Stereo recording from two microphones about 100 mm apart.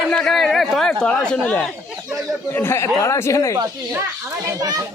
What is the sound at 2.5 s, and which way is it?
Speech, 20° left (ahead or behind).